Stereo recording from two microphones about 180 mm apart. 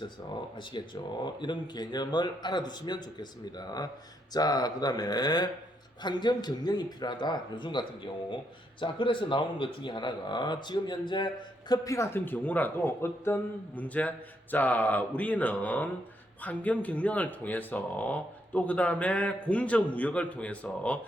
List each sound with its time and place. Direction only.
0.7 s speech: 25° left (ahead or behind)
4.4 s speech: 20° left (ahead or behind)